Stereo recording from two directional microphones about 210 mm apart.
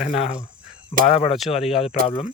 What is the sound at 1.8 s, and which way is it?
Speech, 30° left (ahead or behind).